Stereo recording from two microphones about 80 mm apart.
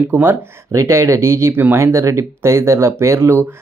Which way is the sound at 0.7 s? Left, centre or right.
Right.